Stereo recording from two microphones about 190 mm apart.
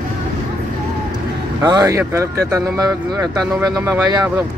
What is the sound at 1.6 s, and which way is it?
Speech, 20° right (ahead or behind).